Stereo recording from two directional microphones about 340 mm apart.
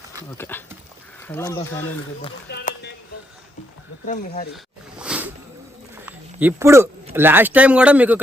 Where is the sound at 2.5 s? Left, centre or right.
Left.